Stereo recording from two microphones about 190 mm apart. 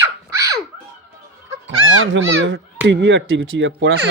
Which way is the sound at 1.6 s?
90° right.